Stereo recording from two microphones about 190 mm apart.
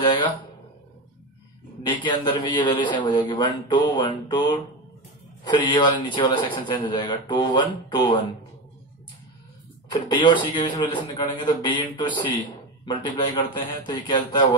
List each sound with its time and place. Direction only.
0.0 s a sound: 25° left (ahead or behind)
1.8 s a man's voice: 25° left (ahead or behind)
9.8 s a man's voice: 20° left (ahead or behind)